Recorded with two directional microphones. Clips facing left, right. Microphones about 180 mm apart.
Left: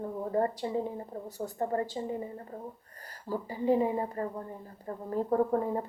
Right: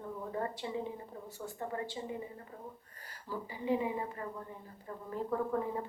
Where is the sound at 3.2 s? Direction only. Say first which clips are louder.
Left 7 dB; 40° left (ahead or behind).